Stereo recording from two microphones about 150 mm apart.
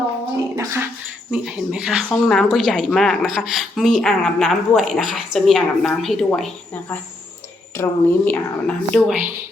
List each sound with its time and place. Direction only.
0.5 s speech: 20° right (ahead or behind)
1.3 s a woman's voice: 5° right (ahead or behind)
7.8 s a woman's voice: 10° left (ahead or behind)